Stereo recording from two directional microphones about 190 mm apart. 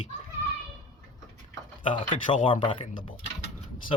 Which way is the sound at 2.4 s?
25° left (ahead or behind).